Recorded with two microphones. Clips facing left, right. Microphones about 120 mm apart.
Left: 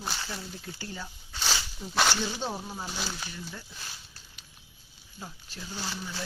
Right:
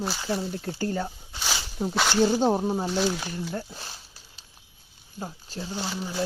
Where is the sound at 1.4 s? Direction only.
10° right (ahead or behind).